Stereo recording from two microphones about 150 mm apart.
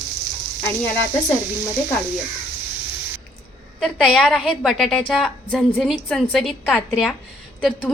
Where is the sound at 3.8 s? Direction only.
5° left (ahead or behind).